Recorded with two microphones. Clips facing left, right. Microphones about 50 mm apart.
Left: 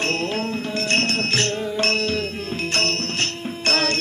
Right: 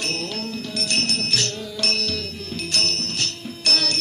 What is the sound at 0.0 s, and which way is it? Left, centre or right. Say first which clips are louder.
Music: left 5 dB; left.